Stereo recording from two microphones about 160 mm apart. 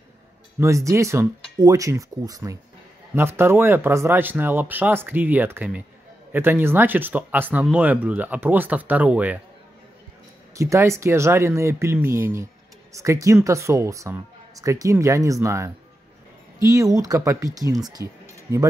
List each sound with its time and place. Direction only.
0.6 s speech: 20° right (ahead or behind)
10.5 s speech: 20° right (ahead or behind)